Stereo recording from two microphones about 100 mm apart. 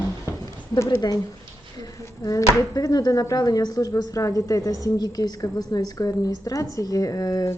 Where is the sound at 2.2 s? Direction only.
35° left (ahead or behind).